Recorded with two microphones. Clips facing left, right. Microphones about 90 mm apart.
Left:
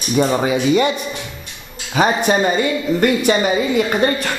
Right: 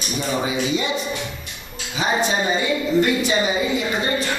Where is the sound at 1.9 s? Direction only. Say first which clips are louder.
Left 5 dB; 55° left (ahead or behind).